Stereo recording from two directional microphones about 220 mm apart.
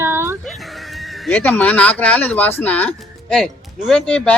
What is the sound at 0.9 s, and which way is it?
Speech, centre (ahead or behind).